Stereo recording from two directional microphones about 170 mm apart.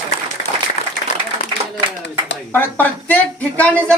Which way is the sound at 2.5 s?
10° left (ahead or behind).